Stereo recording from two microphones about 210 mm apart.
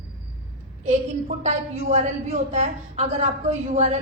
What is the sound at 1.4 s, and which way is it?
A woman's voice, 30° right (ahead or behind).